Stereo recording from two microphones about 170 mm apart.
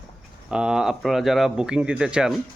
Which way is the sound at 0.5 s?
5° right (ahead or behind).